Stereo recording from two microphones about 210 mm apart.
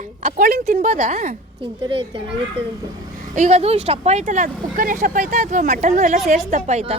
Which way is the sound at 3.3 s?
35° right (ahead or behind).